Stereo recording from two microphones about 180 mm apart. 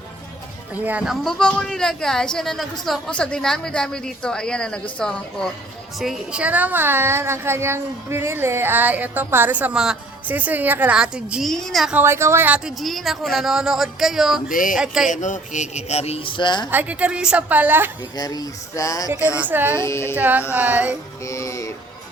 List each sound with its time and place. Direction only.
0.7 s a woman's voice: 10° right (ahead or behind)
14.5 s music: 50° left (ahead or behind)
15.0 s a man's voice: 45° left (ahead or behind); by 16.6 s 25° left (ahead or behind)
16.6 s a woman's voice: 10° right (ahead or behind)
18.2 s speech: 20° left (ahead or behind)
19.4 s a woman's voice: 10° right (ahead or behind)
19.7 s speech: 15° left (ahead or behind)
20.1 s a woman's voice: 10° right (ahead or behind)
21.2 s music: 15° left (ahead or behind)